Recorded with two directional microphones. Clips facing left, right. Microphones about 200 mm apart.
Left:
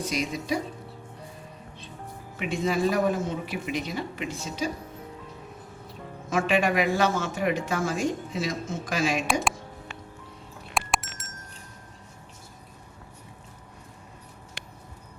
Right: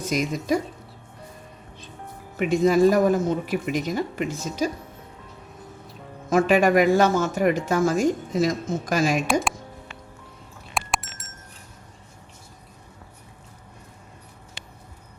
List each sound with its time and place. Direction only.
0.0 s speech: 45° right (ahead or behind)
2.4 s speech: 40° right (ahead or behind)
6.3 s speech: 40° right (ahead or behind)
10.8 s chink: centre (ahead or behind)